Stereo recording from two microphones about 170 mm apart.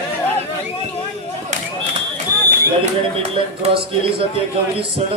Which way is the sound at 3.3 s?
35° right (ahead or behind).